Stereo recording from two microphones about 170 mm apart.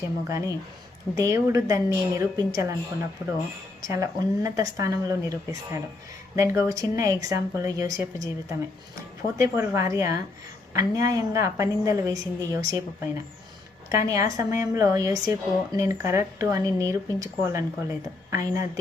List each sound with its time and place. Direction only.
0.3 s speech: 20° right (ahead or behind)
3.8 s speech: 20° right (ahead or behind)